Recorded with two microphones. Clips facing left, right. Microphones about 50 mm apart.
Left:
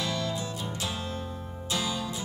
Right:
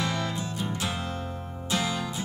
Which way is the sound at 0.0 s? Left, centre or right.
Right.